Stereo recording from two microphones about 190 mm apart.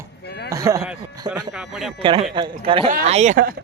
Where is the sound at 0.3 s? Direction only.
60° left (ahead or behind).